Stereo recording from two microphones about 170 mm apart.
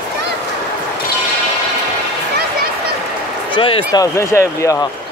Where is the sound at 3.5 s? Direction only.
30° left (ahead or behind).